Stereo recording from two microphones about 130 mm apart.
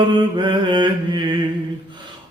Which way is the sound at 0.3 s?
35° right (ahead or behind).